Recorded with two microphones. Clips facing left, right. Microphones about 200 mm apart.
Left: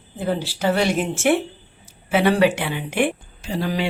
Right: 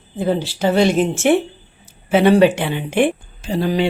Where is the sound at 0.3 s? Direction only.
20° right (ahead or behind).